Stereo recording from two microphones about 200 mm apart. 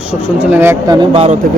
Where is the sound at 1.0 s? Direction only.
30° right (ahead or behind).